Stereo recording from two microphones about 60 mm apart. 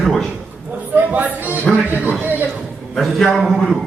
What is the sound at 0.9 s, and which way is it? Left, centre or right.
A man's voice, right.